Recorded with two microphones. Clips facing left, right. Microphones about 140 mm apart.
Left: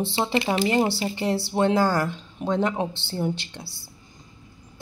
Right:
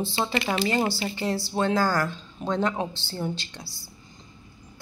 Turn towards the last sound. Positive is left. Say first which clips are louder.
# left 1 dB
turn(degrees=60)  # may be behind; listen again after turning